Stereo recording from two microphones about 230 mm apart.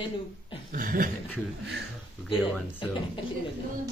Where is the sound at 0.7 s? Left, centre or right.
Right.